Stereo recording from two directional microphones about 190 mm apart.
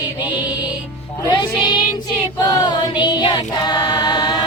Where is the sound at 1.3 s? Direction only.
25° left (ahead or behind).